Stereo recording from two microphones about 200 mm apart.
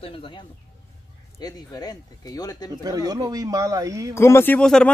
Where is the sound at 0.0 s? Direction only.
25° left (ahead or behind).